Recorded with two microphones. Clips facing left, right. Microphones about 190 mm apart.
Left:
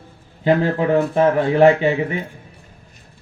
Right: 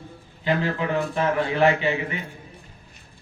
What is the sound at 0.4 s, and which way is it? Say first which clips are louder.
Speech: left 7 dB; 45° left (ahead or behind).